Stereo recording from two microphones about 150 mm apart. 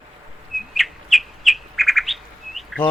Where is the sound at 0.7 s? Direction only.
Centre (ahead or behind).